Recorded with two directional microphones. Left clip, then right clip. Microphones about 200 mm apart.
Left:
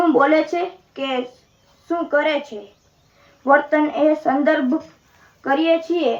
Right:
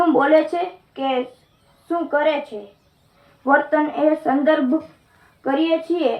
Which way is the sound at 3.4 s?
45° left (ahead or behind).